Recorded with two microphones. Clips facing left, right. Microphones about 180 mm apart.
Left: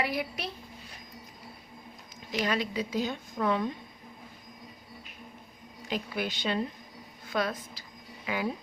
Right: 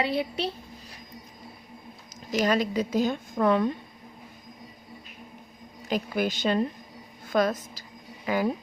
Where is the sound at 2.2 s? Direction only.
45° right (ahead or behind).